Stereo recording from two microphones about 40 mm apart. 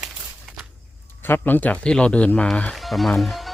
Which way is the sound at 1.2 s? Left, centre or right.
Left.